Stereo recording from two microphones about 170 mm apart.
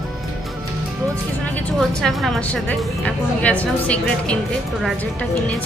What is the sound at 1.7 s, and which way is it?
A woman's voice, centre (ahead or behind).